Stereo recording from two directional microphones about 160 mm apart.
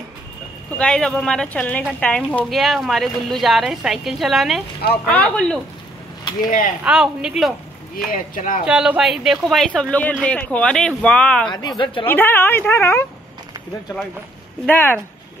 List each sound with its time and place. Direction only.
0.7 s a woman's voice: 5° left (ahead or behind)
6.8 s a woman's voice: 5° right (ahead or behind)
8.1 s speech: 60° left (ahead or behind)
8.6 s a woman's voice: 5° right (ahead or behind)
11.5 s speech: 25° left (ahead or behind)
12.1 s speech: 15° left (ahead or behind)
14.7 s speech: 15° left (ahead or behind)